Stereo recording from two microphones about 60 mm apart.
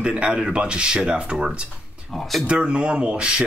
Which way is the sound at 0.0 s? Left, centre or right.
Centre.